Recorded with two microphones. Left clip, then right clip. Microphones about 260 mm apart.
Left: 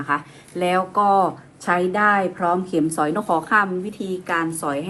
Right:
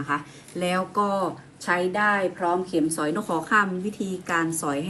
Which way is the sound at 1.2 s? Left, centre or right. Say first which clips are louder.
Left 8 dB; left.